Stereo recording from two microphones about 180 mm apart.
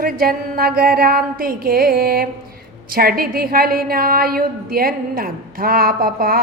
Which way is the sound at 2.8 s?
55° right (ahead or behind).